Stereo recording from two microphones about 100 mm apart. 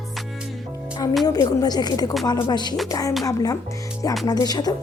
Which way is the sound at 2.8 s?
35° left (ahead or behind).